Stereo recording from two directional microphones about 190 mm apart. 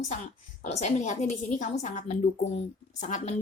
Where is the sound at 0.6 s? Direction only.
35° left (ahead or behind).